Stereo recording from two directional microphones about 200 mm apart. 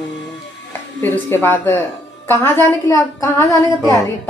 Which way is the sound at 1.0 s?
10° left (ahead or behind).